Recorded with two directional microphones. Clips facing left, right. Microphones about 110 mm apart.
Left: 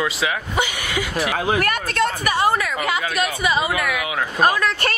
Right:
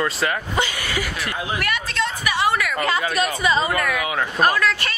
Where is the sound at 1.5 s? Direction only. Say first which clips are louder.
Left 4 dB; 45° left (ahead or behind).